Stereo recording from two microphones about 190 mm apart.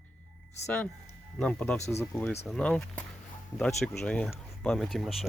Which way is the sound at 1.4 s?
5° left (ahead or behind).